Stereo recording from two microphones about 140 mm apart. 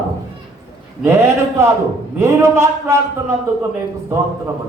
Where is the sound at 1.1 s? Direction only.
20° right (ahead or behind).